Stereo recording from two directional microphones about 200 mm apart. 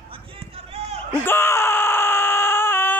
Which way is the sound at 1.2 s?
10° left (ahead or behind).